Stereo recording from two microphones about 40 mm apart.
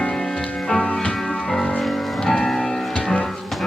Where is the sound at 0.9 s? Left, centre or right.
Left.